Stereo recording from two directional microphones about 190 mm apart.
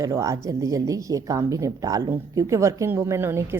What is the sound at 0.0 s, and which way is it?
Speech, 15° right (ahead or behind).